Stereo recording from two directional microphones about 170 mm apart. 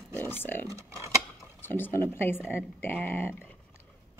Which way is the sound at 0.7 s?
15° right (ahead or behind).